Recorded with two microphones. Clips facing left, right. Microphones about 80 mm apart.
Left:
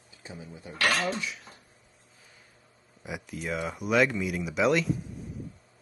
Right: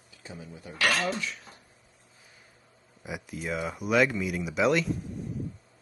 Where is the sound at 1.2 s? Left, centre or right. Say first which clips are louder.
Even; centre.